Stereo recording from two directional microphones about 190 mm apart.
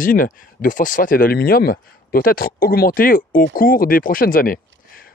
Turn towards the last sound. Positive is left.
turn(degrees=50)  # may be behind; listen again after turning